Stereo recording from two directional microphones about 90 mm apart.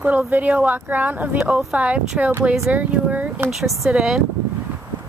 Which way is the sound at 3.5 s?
Centre (ahead or behind).